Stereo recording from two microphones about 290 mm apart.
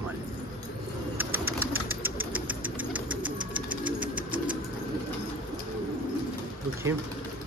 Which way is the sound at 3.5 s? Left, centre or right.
Centre.